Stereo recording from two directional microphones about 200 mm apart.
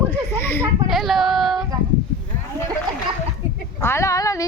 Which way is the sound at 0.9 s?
Centre (ahead or behind).